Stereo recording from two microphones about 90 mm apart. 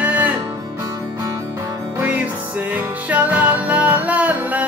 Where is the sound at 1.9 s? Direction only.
20° right (ahead or behind).